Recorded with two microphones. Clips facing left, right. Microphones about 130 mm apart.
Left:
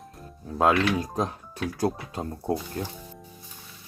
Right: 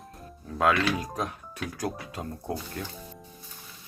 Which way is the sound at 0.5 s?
30° left (ahead or behind).